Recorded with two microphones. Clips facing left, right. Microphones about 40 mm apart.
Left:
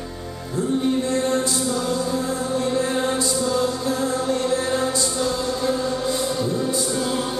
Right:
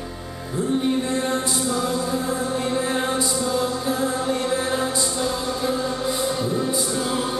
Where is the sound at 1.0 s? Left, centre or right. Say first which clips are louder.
Left 2 dB; centre.